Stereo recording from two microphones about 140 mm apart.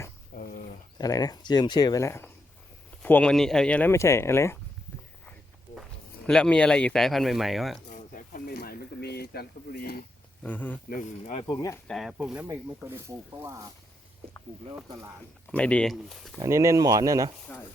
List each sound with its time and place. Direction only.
0.3 s a sound: 75° left (ahead or behind)
0.9 s speech: 25° left (ahead or behind); by 3.9 s 10° left (ahead or behind)
3.9 s speech: 20° left (ahead or behind)
6.2 s speech: 5° left (ahead or behind)
7.9 s a sound: 80° left
9.3 s speech: 90° left
10.4 s speech: 10° left (ahead or behind)
11.4 s speech: 25° left (ahead or behind)
11.9 s speech: centre (ahead or behind)
12.1 s speech: 10° right (ahead or behind)
15.5 s speech: 10° left (ahead or behind)
16.4 s speech: 20° right (ahead or behind)
17.4 s speech: 10° left (ahead or behind)